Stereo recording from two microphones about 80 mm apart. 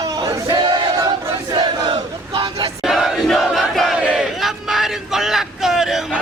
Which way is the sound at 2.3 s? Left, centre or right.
Right.